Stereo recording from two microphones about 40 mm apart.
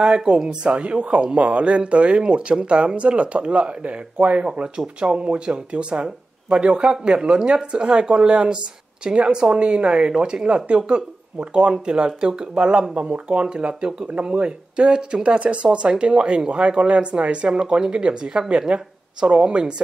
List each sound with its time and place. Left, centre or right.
0.0 s speech: right
0.7 s a woman's voice: right